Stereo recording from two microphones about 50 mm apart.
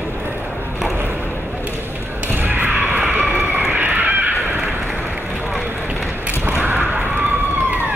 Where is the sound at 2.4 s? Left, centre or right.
Right.